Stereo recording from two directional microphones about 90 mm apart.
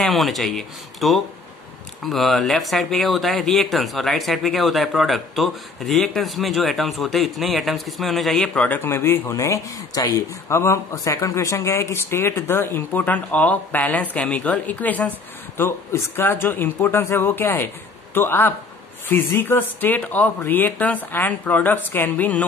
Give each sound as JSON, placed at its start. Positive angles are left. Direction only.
{"t": 0.0, "sound": "speech", "side_deg": 0}
{"t": 8.6, "sound": "speech", "side_deg": 25}